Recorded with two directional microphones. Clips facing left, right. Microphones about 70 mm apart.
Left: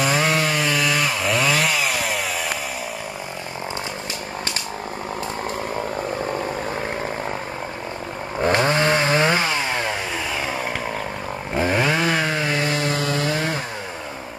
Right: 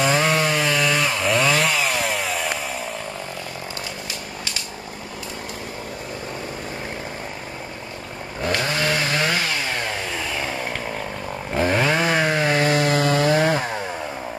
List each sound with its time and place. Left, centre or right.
0.0 s chainsaw: centre
8.4 s chainsaw: left
10.3 s chainsaw: centre
12.5 s chainsaw: right
13.3 s chainsaw: right